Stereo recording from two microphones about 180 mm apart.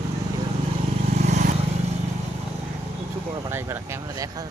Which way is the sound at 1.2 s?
40° right (ahead or behind).